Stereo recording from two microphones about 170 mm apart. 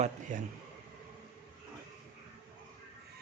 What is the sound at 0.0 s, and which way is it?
Speech, 45° right (ahead or behind).